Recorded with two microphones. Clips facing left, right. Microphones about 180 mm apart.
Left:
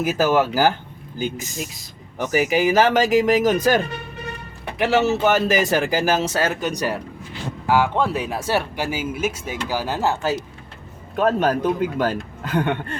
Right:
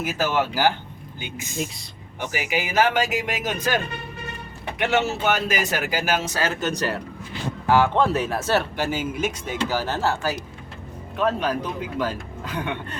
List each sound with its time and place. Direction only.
0.0 s speech: 40° left (ahead or behind)
1.5 s speech: centre (ahead or behind)
2.1 s speech: 40° left (ahead or behind)
4.8 s speech: 35° left (ahead or behind)
6.1 s speech: 30° left (ahead or behind)
6.5 s speech: 10° left (ahead or behind)
11.2 s speech: 45° left (ahead or behind)